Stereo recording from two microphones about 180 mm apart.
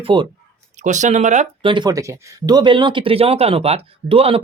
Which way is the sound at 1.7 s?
25° right (ahead or behind).